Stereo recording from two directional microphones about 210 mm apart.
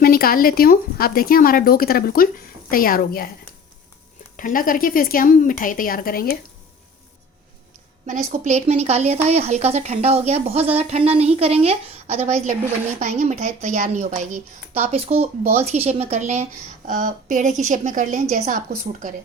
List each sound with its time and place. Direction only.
0.0 s speech: 45° left (ahead or behind)
4.4 s a woman's voice: 40° left (ahead or behind)
8.3 s a woman's voice: 35° right (ahead or behind)